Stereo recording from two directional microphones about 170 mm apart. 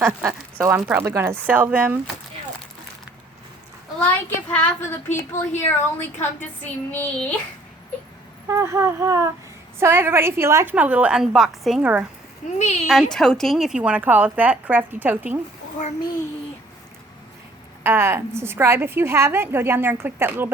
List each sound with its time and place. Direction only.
0.0 s a woman's voice: 15° right (ahead or behind)
4.0 s speech: 10° left (ahead or behind)
5.3 s speech: 40° left (ahead or behind)
6.9 s speech: 10° left (ahead or behind)
8.4 s a woman's voice: 15° right (ahead or behind)
12.5 s speech: 45° left (ahead or behind)
12.9 s a woman's voice: centre (ahead or behind)
17.8 s a woman's voice: 15° right (ahead or behind)